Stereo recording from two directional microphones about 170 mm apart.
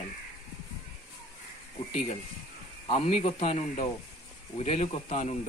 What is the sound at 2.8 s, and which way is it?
Speech, 35° left (ahead or behind).